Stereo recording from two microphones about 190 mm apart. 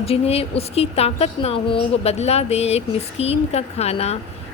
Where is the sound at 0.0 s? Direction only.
30° left (ahead or behind).